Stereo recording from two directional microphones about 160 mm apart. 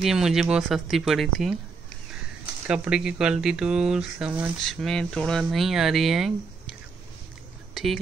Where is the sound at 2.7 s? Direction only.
5° right (ahead or behind).